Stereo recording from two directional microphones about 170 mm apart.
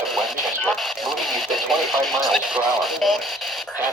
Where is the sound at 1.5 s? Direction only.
Centre (ahead or behind).